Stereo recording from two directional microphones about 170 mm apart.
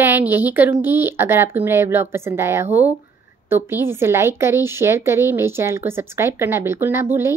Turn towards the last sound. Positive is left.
turn(degrees=-15)  # may be behind; listen again after turning